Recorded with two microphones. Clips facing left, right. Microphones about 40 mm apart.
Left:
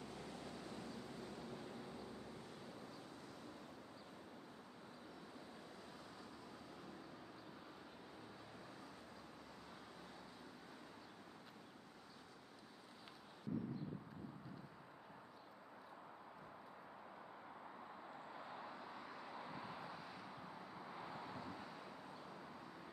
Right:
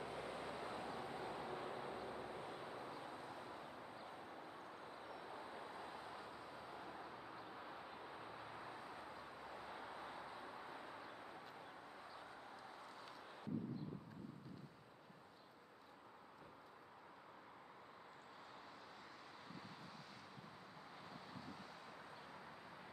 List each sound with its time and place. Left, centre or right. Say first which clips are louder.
0.0 s vehicle: right 4 dB; right
5.0 s vehicle: right 5 dB; right
19.5 s vehicle: left 5 dB; centre